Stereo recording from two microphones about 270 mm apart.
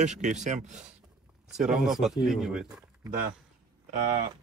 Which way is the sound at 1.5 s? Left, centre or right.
Centre.